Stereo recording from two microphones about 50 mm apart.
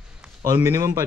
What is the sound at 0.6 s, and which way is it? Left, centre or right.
Speech, right.